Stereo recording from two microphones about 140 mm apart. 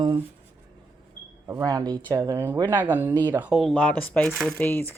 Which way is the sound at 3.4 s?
5° right (ahead or behind).